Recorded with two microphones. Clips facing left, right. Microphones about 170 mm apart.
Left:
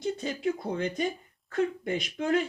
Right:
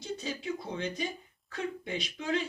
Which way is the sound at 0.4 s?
50° left (ahead or behind).